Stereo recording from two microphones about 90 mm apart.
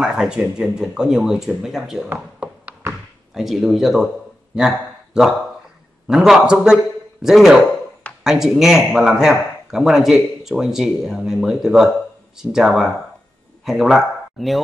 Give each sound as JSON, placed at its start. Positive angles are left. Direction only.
{"t": 0.0, "sound": "speech", "side_deg": -10}
{"t": 2.0, "sound": "a sound", "side_deg": -15}
{"t": 2.9, "sound": "thunk", "side_deg": -5}
{"t": 4.6, "sound": "a man's voice", "side_deg": -5}